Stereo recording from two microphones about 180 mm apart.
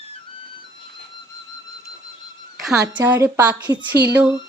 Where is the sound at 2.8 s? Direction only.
15° right (ahead or behind).